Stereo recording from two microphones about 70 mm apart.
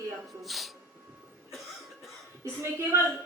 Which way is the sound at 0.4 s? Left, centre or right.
Centre.